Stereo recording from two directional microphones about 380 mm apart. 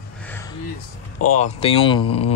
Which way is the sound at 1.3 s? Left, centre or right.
Centre.